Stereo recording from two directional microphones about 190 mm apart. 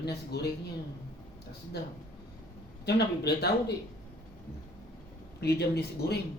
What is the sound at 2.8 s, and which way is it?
Speech, 60° left (ahead or behind).